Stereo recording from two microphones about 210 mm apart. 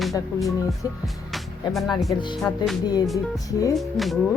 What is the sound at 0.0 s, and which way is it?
Speech, centre (ahead or behind).